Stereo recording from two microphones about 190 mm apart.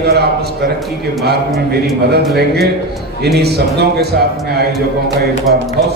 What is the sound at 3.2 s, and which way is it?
Speech, 60° right (ahead or behind).